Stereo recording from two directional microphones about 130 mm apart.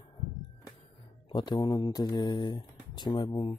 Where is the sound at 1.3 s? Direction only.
35° left (ahead or behind).